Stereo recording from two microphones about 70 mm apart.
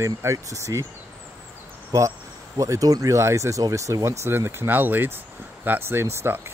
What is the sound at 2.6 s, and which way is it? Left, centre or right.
Speech, right.